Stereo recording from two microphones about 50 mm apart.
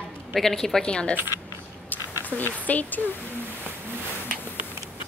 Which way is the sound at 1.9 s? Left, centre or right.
Left.